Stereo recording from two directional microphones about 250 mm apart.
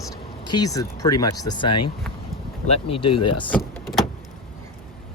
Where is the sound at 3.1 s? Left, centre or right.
Left.